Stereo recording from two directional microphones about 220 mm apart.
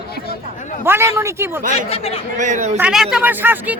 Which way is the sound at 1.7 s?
25° left (ahead or behind).